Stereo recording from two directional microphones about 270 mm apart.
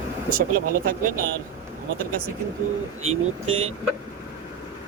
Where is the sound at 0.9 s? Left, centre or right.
Right.